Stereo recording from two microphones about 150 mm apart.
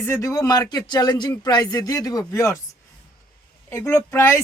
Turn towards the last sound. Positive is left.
turn(degrees=15)  # may be behind; listen again after turning